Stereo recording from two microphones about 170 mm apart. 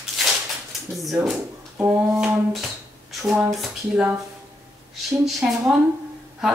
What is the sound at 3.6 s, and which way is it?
Speech, 5° right (ahead or behind).